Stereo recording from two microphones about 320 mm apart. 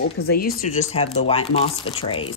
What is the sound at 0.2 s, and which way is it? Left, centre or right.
Speech, left.